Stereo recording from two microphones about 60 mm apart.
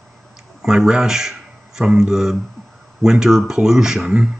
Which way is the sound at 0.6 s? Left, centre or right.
Centre.